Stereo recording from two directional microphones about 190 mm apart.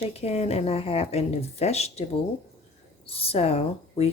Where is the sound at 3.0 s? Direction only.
30° left (ahead or behind).